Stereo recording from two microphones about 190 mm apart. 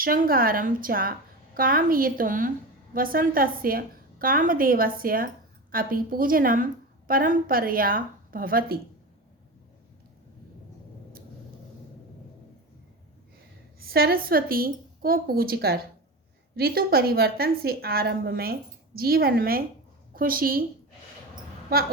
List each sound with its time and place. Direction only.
0.0 s a woman's voice: 50° right (ahead or behind)
13.7 s a woman's voice: 55° right (ahead or behind)